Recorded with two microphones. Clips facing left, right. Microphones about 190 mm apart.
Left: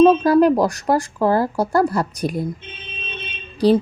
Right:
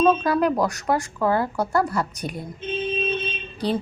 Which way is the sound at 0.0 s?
35° left (ahead or behind).